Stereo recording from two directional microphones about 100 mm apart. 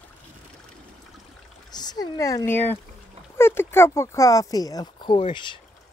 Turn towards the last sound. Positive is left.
turn(degrees=50)  # may be behind; listen again after turning